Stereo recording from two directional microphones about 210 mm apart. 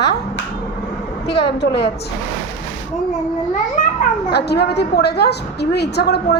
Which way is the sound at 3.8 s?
40° left (ahead or behind).